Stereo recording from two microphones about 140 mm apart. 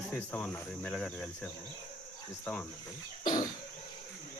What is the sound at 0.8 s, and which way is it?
Speech, 5° left (ahead or behind).